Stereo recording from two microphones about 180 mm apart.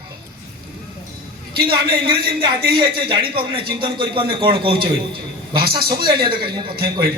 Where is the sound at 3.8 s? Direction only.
30° right (ahead or behind).